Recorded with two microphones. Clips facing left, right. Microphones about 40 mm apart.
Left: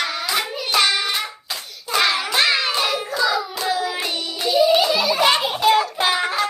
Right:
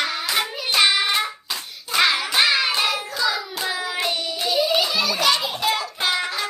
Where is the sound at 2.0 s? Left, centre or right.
Centre.